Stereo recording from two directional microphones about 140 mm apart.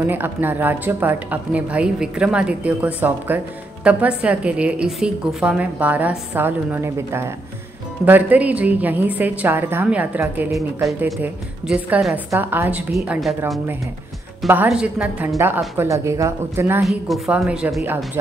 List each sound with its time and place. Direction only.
0.0 s a woman's voice: 15° right (ahead or behind)
10.5 s a woman's voice: centre (ahead or behind)
14.5 s a woman's voice: 10° right (ahead or behind)
16.8 s a woman's voice: 5° right (ahead or behind)